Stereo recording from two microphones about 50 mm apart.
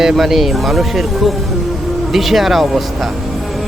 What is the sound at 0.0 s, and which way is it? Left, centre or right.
Speech, centre.